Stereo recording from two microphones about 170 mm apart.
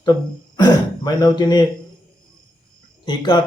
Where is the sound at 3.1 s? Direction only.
25° left (ahead or behind).